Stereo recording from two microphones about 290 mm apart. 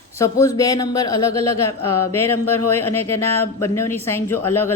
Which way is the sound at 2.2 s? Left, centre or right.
Centre.